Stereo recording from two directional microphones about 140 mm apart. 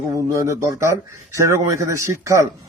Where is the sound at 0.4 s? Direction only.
20° right (ahead or behind).